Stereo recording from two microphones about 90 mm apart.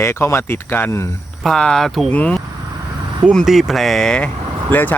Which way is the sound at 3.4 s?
Centre (ahead or behind).